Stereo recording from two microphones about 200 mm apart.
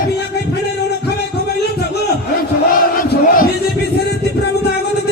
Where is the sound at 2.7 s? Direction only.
45° left (ahead or behind).